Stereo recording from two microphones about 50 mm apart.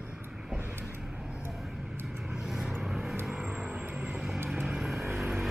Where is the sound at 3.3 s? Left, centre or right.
Right.